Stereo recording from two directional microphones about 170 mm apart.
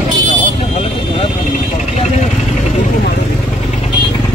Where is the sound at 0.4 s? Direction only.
40° left (ahead or behind).